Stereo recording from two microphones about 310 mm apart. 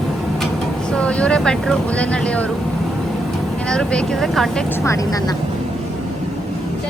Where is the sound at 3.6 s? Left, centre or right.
Centre.